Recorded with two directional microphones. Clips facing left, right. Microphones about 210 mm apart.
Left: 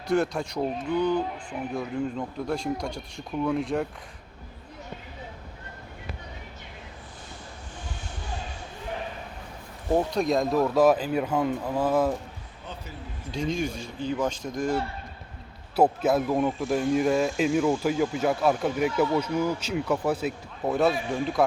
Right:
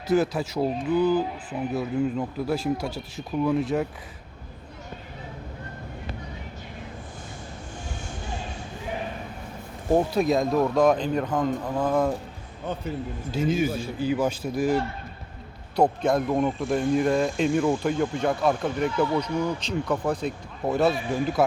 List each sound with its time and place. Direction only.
0.1 s speech: 5° right (ahead or behind)
10.1 s speech: 5° right (ahead or behind)
13.3 s a man's voice: 5° right (ahead or behind)
15.7 s speech: 5° left (ahead or behind)